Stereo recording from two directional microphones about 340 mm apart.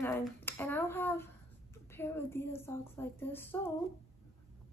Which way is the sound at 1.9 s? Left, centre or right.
Centre.